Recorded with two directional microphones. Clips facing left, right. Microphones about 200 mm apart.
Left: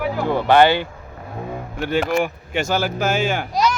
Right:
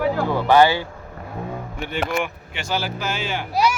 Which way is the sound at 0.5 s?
60° left (ahead or behind).